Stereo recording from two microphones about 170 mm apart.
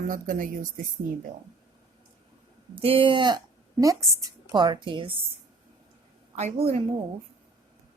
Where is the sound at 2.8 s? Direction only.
30° right (ahead or behind).